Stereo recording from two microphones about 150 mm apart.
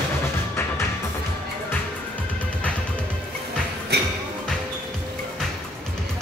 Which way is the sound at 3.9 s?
90° right.